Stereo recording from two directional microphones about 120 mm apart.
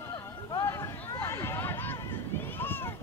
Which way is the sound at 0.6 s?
20° left (ahead or behind).